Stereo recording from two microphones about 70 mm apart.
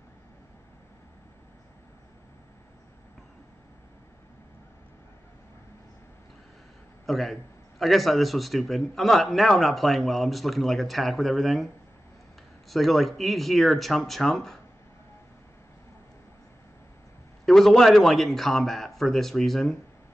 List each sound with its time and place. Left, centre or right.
7.1 s a man's voice: centre
17.5 s a man's voice: centre